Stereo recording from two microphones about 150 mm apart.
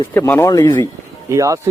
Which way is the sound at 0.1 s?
15° left (ahead or behind).